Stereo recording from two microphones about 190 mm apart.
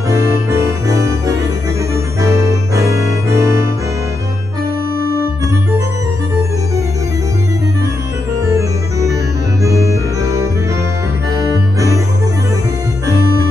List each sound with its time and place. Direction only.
0.1 s music: 15° right (ahead or behind)
11.3 s music: 15° right (ahead or behind)